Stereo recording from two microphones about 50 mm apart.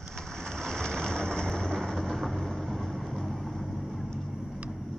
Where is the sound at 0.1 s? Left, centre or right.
Centre.